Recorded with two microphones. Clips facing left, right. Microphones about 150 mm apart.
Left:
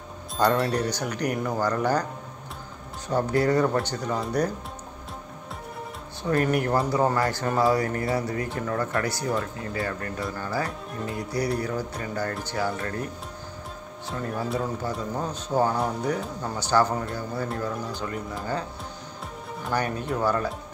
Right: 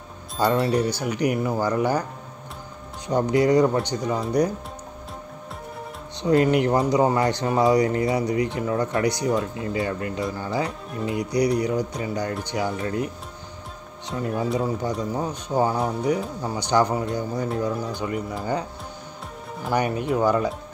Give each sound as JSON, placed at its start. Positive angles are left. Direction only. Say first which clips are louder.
{"t": 0.4, "sound": "speech", "louder": "right 2 dB", "side_deg": -5}
{"t": 3.1, "sound": "speech", "louder": "right 4 dB", "side_deg": -15}
{"t": 6.2, "sound": "speech", "louder": "right 5 dB", "side_deg": -20}
{"t": 10.9, "sound": "speech", "louder": "right 4 dB", "side_deg": 0}
{"t": 11.1, "sound": "speech", "louder": "right 6 dB", "side_deg": -15}
{"t": 14.1, "sound": "speech", "louder": "right 4 dB", "side_deg": -10}
{"t": 19.7, "sound": "speech", "louder": "right 5 dB", "side_deg": -15}